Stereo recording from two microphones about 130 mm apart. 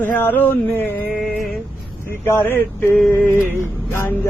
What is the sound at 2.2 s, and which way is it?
Vehicle, 15° left (ahead or behind).